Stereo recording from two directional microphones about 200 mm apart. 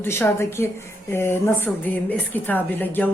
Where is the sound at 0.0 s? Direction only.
10° left (ahead or behind).